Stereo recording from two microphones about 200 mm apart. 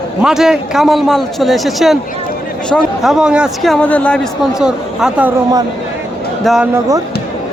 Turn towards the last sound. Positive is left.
turn(degrees=0)  # may be behind; listen again after turning